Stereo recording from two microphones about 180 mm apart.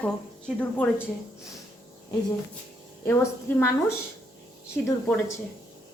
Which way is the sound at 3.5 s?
15° left (ahead or behind).